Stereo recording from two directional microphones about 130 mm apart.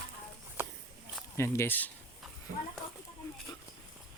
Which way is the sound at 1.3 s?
20° left (ahead or behind).